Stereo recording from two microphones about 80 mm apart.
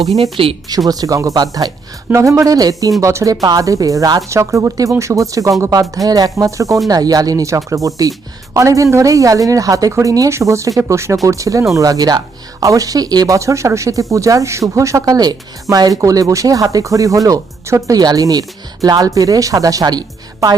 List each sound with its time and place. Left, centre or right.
0.4 s speech: right
0.9 s a woman's voice: right
6.8 s a woman's voice: right
18.0 s a woman's voice: right